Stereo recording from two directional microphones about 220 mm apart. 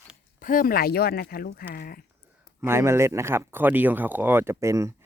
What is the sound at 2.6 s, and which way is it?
Speech, 10° right (ahead or behind).